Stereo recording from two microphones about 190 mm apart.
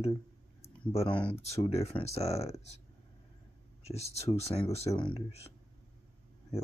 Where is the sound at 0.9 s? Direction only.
30° left (ahead or behind).